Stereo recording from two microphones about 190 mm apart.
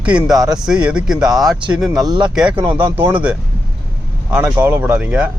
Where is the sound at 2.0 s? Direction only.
25° right (ahead or behind).